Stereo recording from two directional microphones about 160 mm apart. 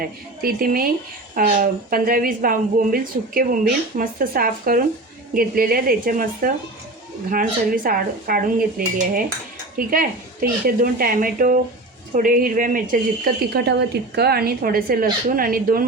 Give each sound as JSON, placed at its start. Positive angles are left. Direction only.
{"t": 0.0, "sound": "a woman's voice", "side_deg": -65}